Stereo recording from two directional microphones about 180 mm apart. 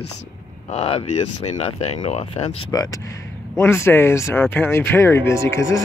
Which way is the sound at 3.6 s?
15° left (ahead or behind).